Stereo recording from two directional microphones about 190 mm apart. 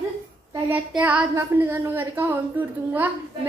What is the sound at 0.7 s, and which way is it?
A woman's voice, 5° right (ahead or behind).